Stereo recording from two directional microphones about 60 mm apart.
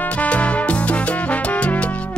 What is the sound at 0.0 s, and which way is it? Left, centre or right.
Music, left.